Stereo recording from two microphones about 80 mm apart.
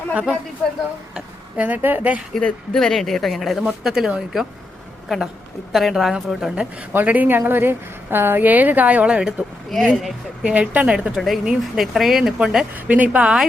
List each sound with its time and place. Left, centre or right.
0.1 s a woman's voice: centre
2.3 s speech: centre
6.9 s a woman's voice: right
9.6 s speech: centre
10.4 s a woman's voice: centre
12.7 s a woman's voice: centre